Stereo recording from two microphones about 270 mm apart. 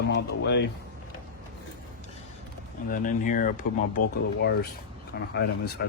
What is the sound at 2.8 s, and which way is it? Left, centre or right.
Speech, left.